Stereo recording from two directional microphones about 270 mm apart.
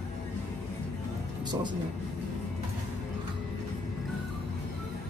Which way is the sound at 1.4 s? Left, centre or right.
Centre.